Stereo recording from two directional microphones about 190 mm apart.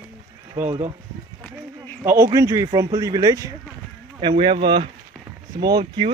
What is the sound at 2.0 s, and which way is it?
Speech, 15° right (ahead or behind).